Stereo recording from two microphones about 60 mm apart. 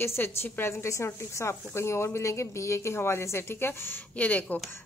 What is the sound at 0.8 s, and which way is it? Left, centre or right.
A woman's voice, left.